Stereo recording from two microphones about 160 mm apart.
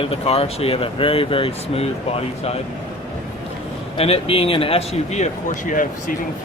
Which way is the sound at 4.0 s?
35° left (ahead or behind).